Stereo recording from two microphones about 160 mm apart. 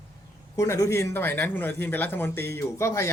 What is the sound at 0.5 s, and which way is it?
A man's voice, 20° left (ahead or behind).